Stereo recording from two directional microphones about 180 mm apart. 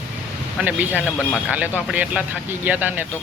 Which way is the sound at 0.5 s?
10° right (ahead or behind).